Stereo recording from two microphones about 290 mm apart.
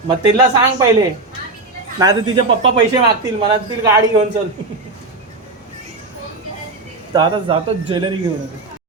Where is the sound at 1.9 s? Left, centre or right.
Centre.